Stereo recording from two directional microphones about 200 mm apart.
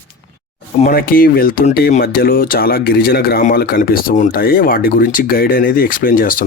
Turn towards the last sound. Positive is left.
turn(degrees=45)  # may be behind; listen again after turning